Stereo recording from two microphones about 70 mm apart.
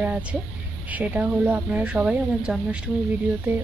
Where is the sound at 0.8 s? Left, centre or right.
Right.